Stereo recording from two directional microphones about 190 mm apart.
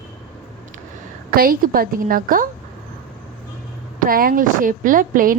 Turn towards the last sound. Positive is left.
turn(degrees=-45)  # may be behind; listen again after turning